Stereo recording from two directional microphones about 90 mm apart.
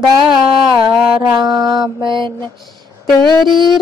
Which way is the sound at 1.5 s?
50° right (ahead or behind).